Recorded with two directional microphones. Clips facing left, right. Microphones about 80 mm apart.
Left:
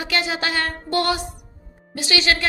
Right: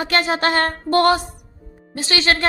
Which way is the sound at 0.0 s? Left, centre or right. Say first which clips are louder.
Right 5 dB; right.